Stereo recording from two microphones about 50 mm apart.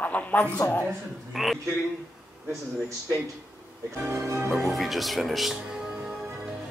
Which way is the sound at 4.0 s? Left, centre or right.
Right.